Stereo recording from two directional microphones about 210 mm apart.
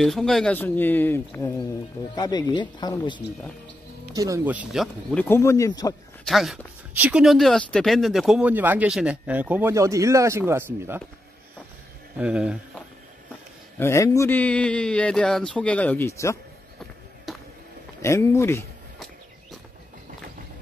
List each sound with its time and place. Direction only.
0.0 s a man's voice: centre (ahead or behind); by 3.2 s 20° left (ahead or behind)
4.1 s speech: 15° right (ahead or behind)
5.1 s a man's voice: 10° left (ahead or behind)
6.2 s speech: centre (ahead or behind)
12.2 s speech: 5° right (ahead or behind)
13.7 s a man's voice: 15° left (ahead or behind)
17.3 s a sound: centre (ahead or behind)
18.0 s a man's voice: 15° left (ahead or behind)